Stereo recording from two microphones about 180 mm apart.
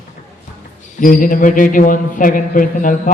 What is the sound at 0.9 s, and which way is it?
Speech, 50° left (ahead or behind).